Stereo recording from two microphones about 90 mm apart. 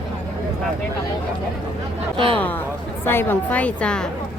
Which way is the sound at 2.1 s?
85° right.